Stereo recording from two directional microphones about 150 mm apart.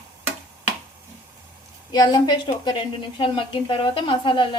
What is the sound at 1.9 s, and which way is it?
A woman's voice, 25° left (ahead or behind).